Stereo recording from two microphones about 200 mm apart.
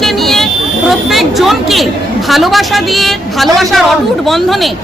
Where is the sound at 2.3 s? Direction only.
Centre (ahead or behind).